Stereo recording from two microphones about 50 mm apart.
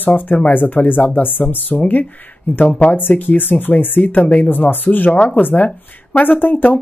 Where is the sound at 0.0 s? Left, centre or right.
Left.